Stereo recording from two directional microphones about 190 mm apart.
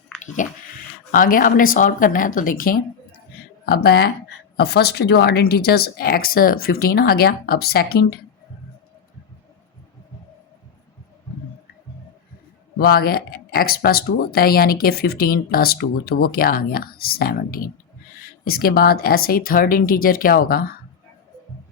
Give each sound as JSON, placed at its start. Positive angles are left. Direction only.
{"t": 0.4, "sound": "speech", "side_deg": 40}
{"t": 12.8, "sound": "speech", "side_deg": 50}